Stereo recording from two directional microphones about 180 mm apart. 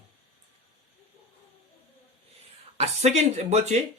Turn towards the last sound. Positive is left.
turn(degrees=-40)  # may be behind; listen again after turning